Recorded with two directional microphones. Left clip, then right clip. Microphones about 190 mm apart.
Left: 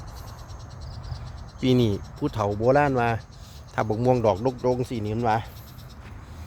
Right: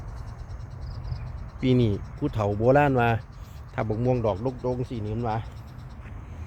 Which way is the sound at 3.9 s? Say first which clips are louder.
Left 5 dB; 25° left (ahead or behind).